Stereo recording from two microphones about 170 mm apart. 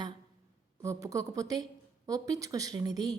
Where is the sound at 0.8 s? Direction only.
20° right (ahead or behind).